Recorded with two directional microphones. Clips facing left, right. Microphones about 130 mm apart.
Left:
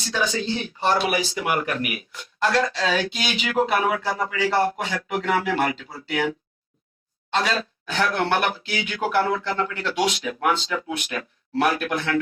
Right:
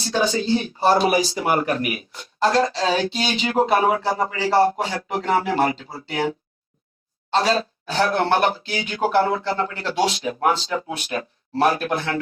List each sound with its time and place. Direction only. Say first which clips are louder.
0.0 s speech: right 4 dB; 35° right (ahead or behind)